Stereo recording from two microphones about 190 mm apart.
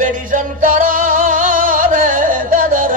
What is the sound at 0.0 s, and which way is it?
Music, 45° right (ahead or behind).